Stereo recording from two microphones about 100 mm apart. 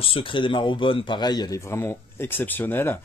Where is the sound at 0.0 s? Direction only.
65° left (ahead or behind); by 1.6 s 45° left (ahead or behind).